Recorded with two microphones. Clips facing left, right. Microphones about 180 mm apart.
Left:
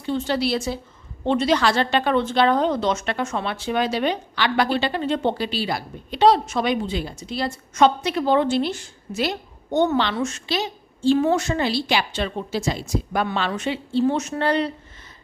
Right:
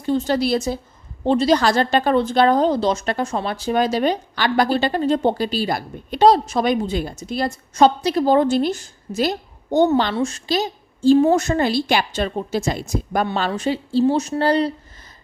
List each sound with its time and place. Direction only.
0.0 s a woman's voice: 40° right (ahead or behind)
13.2 s a woman's voice: 35° right (ahead or behind)